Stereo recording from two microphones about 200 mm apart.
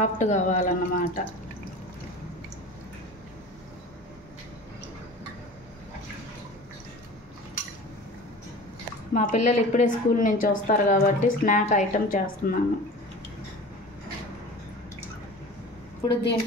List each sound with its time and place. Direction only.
0.0 s speech: 35° left (ahead or behind)
9.1 s speech: 35° left (ahead or behind)
16.1 s a woman's voice: 55° left (ahead or behind)